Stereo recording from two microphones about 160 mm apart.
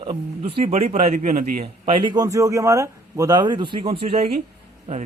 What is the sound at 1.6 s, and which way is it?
A man's voice, 35° right (ahead or behind).